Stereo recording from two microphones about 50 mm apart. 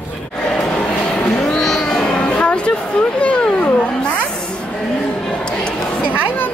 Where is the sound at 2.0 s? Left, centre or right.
Left.